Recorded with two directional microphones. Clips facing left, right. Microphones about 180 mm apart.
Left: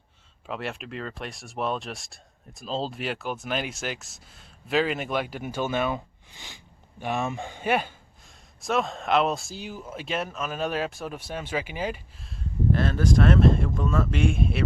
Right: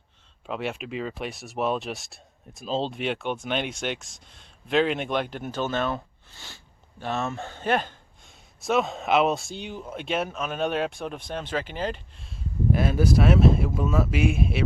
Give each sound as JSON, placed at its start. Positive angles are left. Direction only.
{"t": 0.4, "sound": "speech", "side_deg": 0}
{"t": 12.7, "sound": "speech", "side_deg": -10}